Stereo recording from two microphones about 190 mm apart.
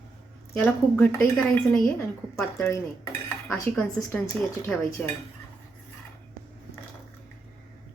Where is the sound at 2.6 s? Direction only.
15° left (ahead or behind).